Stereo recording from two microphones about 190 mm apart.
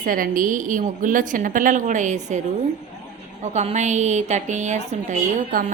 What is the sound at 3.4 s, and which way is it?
A woman's voice, 35° right (ahead or behind).